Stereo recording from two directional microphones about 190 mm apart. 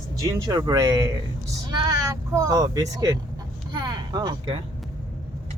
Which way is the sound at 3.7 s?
20° right (ahead or behind).